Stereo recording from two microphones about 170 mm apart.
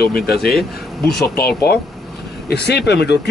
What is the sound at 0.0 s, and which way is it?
Speech, 65° left (ahead or behind).